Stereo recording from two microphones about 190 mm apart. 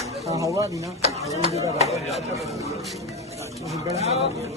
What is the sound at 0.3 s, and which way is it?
Speech, 15° right (ahead or behind).